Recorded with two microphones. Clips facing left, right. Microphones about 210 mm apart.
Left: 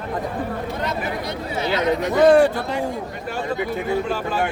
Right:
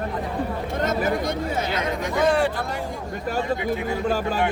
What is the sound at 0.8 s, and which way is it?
Speech, 45° right (ahead or behind).